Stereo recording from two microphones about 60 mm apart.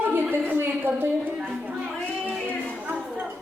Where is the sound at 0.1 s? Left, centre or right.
Right.